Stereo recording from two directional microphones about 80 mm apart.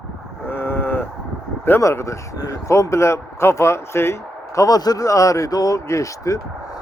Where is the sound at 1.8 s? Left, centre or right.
Left.